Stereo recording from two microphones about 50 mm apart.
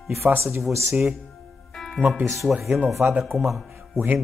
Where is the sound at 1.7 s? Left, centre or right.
Centre.